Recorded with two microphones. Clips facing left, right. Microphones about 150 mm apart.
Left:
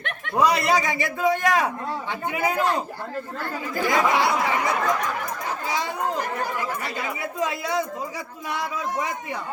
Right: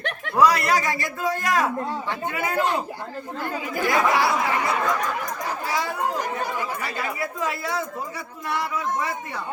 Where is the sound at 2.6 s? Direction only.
15° right (ahead or behind).